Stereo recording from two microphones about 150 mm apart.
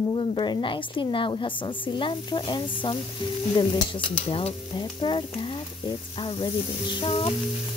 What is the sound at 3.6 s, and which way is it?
A woman's voice, 35° left (ahead or behind).